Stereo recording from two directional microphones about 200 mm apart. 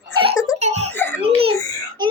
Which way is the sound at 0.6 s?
35° right (ahead or behind).